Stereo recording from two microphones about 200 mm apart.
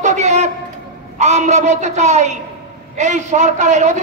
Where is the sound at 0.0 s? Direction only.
35° right (ahead or behind).